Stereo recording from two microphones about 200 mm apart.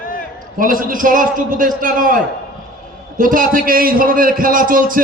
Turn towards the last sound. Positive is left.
turn(degrees=-45)  # may be behind; listen again after turning